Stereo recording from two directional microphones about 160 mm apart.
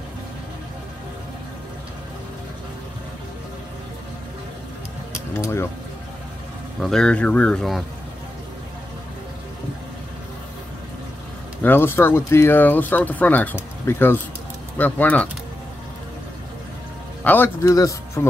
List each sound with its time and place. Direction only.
5.3 s speech: 15° left (ahead or behind)
6.8 s speech: 5° left (ahead or behind)
11.6 s speech: 15° left (ahead or behind)
17.2 s speech: 10° left (ahead or behind)